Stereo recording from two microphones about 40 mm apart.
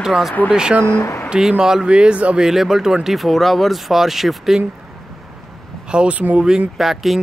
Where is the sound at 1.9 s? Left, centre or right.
Right.